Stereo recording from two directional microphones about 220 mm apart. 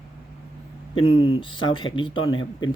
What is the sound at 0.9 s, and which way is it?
Speech, 25° left (ahead or behind).